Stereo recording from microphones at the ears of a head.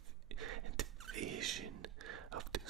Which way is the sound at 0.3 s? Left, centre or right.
Right.